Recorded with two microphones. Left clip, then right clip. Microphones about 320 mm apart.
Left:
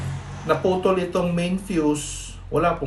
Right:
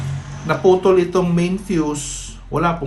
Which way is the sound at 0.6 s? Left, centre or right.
Right.